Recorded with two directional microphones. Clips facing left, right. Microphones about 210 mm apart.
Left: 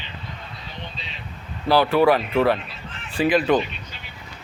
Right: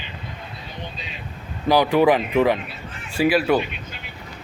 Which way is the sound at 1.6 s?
15° right (ahead or behind).